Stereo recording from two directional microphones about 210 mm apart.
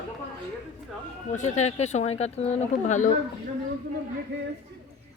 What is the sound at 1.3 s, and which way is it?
Speech, 35° left (ahead or behind).